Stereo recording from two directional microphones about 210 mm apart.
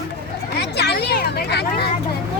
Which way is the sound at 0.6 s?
50° left (ahead or behind).